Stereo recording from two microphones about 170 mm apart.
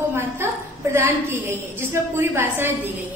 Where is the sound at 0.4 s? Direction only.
15° right (ahead or behind).